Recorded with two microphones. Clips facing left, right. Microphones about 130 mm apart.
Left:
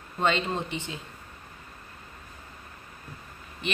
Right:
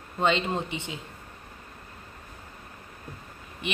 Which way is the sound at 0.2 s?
15° right (ahead or behind).